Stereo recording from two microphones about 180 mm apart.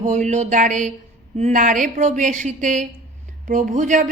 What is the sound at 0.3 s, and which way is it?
A woman's voice, 40° right (ahead or behind).